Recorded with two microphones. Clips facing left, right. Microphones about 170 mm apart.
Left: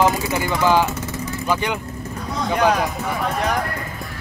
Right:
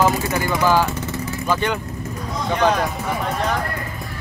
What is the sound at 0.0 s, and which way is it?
Speech, 15° left (ahead or behind).